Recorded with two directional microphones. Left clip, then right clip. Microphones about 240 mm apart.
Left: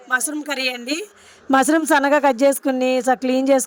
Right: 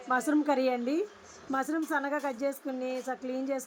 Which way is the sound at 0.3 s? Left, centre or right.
Left.